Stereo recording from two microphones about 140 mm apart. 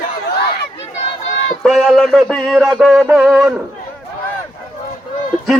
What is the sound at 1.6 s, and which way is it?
A man's voice, centre (ahead or behind).